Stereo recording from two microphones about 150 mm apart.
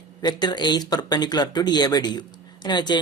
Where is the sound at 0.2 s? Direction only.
30° left (ahead or behind).